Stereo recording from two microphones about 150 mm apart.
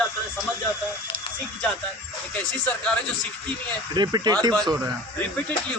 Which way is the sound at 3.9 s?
30° right (ahead or behind).